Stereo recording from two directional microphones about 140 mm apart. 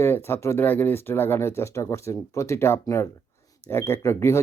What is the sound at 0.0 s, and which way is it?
Speech, 15° left (ahead or behind).